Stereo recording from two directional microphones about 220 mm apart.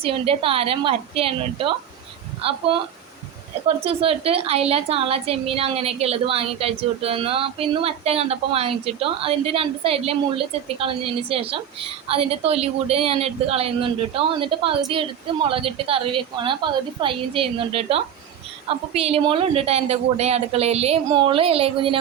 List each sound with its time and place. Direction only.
0.0 s a woman's voice: 25° right (ahead or behind)
3.8 s a woman's voice: 25° right (ahead or behind)